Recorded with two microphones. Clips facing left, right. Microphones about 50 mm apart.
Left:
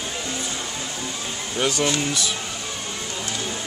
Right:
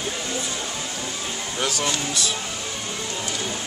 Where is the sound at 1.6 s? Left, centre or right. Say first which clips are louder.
Left 4 dB; left.